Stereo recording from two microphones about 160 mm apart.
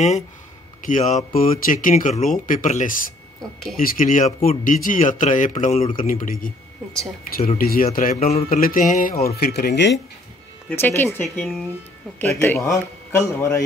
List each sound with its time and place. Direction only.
0.8 s speech: 55° left (ahead or behind)
3.7 s speech: 60° left (ahead or behind); by 5.9 s 40° left (ahead or behind)
5.9 s speech: 55° left (ahead or behind)
8.2 s speech: 40° left (ahead or behind)
8.5 s speech: 65° left (ahead or behind)
9.4 s speech: 85° left
10.8 s a man's voice: 15° left (ahead or behind)
11.2 s speech: centre (ahead or behind)
12.2 s a man's voice: 15° left (ahead or behind)